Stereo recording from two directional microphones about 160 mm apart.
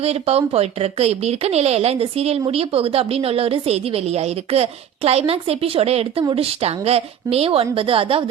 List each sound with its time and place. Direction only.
0.0 s speech: 40° right (ahead or behind)